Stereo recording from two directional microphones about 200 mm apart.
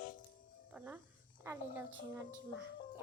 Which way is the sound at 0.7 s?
10° right (ahead or behind).